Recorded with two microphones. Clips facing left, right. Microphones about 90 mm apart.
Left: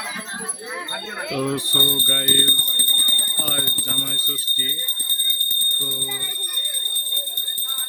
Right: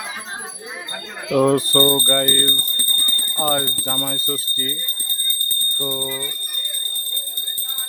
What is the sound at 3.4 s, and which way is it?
Speech, 50° right (ahead or behind).